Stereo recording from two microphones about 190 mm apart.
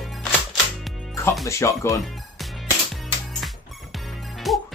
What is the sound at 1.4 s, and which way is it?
Speech, 15° left (ahead or behind).